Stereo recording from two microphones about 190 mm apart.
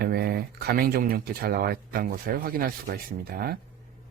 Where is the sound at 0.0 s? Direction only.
55° right (ahead or behind).